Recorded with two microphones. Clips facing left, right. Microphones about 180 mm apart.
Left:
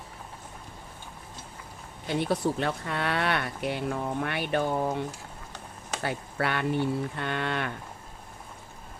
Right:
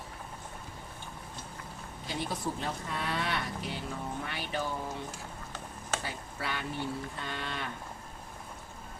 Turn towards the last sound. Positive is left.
turn(degrees=65)  # may be behind; listen again after turning